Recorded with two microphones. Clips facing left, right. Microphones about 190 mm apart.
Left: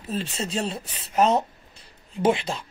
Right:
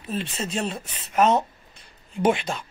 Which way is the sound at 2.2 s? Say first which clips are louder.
Even; 30° left (ahead or behind).